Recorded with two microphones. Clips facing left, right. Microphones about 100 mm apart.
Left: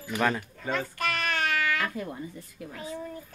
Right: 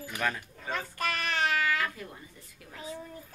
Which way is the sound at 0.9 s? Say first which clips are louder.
Left 2 dB; 30° right (ahead or behind).